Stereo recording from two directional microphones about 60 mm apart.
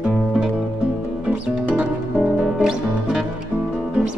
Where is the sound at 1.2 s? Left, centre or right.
Right.